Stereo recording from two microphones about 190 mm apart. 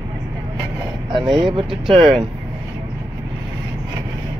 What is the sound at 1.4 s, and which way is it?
Speech, 25° right (ahead or behind).